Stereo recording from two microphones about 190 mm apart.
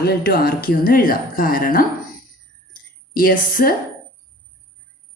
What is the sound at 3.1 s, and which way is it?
Speech, 45° left (ahead or behind).